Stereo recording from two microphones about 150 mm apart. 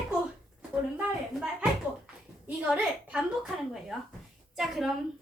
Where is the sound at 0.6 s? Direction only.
5° right (ahead or behind).